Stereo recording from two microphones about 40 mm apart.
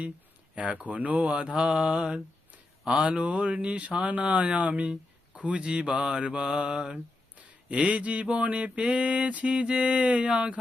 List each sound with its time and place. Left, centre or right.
0.5 s mantra: right
1.4 s mantra: right
7.7 s mantra: right